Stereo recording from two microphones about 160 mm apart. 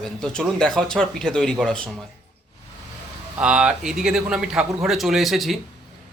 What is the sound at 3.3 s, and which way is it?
Speech, 5° right (ahead or behind).